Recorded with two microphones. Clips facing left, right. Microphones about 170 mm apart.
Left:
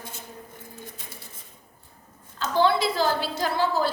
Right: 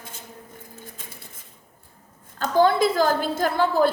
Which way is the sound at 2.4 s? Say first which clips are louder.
Right 4 dB; 45° right (ahead or behind).